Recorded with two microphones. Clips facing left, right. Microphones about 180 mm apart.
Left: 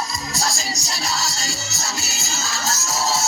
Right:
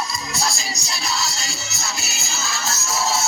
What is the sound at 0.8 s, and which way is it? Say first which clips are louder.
Music: right 1 dB; 40° left (ahead or behind).